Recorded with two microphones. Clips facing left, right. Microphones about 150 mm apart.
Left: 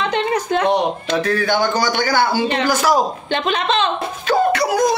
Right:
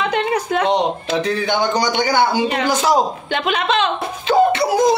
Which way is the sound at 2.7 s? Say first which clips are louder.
Even; 20° right (ahead or behind).